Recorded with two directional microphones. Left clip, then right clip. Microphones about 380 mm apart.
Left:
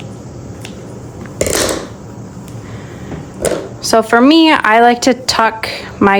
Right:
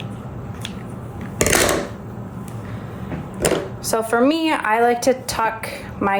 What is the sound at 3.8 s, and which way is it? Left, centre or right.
A woman's voice, left.